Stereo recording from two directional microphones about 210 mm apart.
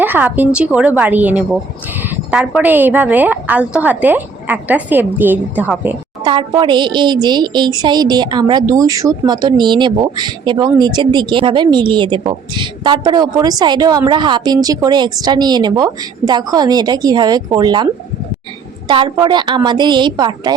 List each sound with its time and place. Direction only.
0.0 s a woman's voice: 10° right (ahead or behind)
6.2 s speech: 20° right (ahead or behind)
18.9 s speech: 20° right (ahead or behind)